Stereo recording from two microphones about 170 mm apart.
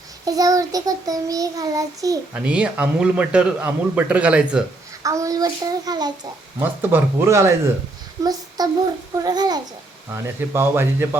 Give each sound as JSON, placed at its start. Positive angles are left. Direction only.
{"t": 0.3, "sound": "child singing", "side_deg": -20}
{"t": 2.3, "sound": "a man's voice", "side_deg": -5}
{"t": 5.0, "sound": "child singing", "side_deg": -20}
{"t": 6.6, "sound": "a man's voice", "side_deg": -15}
{"t": 8.2, "sound": "child singing", "side_deg": -20}
{"t": 10.1, "sound": "a man's voice", "side_deg": -15}